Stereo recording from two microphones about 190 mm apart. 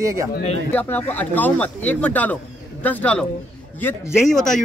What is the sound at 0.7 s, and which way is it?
A man's voice, 10° left (ahead or behind).